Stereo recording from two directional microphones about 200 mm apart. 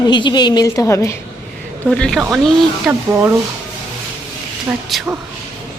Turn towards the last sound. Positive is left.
turn(degrees=0)  # may be behind; listen again after turning